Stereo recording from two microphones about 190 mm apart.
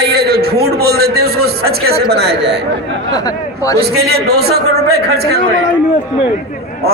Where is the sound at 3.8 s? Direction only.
55° right (ahead or behind).